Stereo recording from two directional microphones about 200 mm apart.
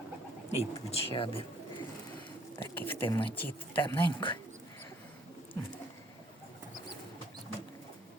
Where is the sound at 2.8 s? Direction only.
10° left (ahead or behind).